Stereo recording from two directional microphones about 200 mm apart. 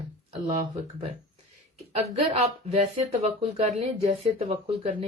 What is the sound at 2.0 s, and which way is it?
Speech, 30° right (ahead or behind).